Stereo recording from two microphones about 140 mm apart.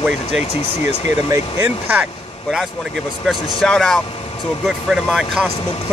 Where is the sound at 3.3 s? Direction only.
5° left (ahead or behind).